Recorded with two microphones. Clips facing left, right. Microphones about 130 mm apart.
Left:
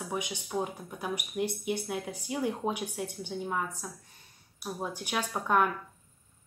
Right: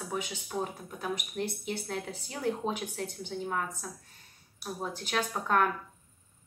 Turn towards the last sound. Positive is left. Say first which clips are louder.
# left 1 dB
turn(degrees=10)  # may be behind; listen again after turning